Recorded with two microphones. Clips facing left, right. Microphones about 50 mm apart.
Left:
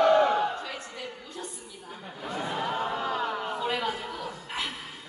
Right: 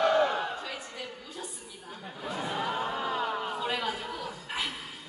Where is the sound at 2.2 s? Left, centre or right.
Centre.